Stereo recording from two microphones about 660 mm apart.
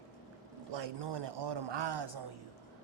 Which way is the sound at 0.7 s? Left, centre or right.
Right.